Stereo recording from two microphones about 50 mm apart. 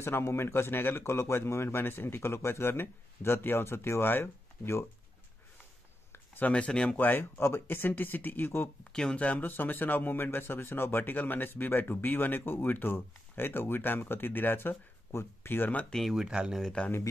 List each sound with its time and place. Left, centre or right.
0.0 s speech: left
6.4 s speech: left
7.0 s speech: left
8.9 s speech: centre
9.2 s speech: left
16.1 s speech: centre